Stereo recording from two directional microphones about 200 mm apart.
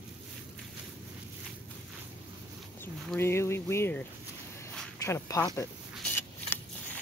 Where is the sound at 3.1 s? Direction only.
10° left (ahead or behind).